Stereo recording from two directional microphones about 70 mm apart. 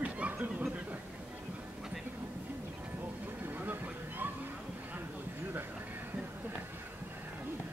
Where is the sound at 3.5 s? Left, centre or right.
Right.